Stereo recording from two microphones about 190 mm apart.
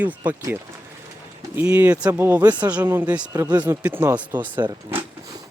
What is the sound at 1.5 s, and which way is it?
Speech, 5° right (ahead or behind).